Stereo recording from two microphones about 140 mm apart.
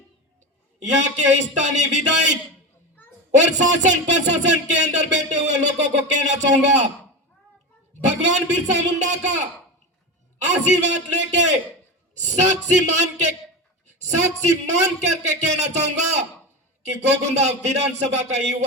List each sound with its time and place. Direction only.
1.0 s speech: 60° right (ahead or behind)
3.3 s speech: 60° right (ahead or behind)
8.0 s a man's voice: 55° right (ahead or behind)